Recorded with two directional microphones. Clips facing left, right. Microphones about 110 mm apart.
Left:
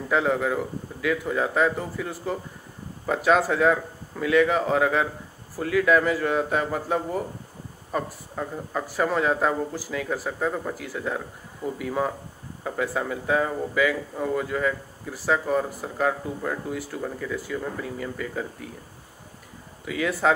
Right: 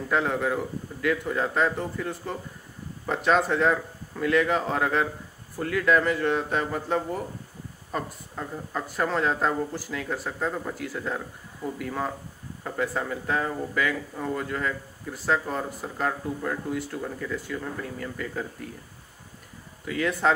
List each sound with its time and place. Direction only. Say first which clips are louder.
0.1 s speech: left 2 dB; centre (ahead or behind)
19.8 s speech: left 1 dB; 5° left (ahead or behind)